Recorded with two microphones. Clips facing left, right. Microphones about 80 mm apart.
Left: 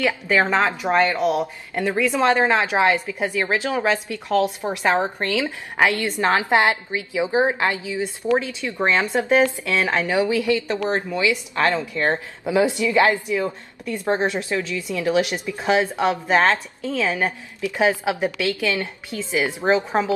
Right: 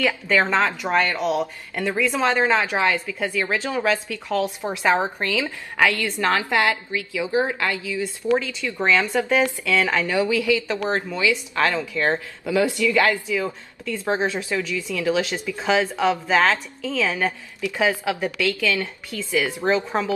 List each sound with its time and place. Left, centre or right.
0.0 s a woman's voice: centre